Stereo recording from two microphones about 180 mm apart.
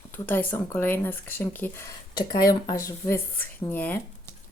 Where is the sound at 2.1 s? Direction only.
20° left (ahead or behind).